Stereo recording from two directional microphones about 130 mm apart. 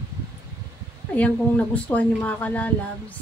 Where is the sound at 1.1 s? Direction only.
10° left (ahead or behind).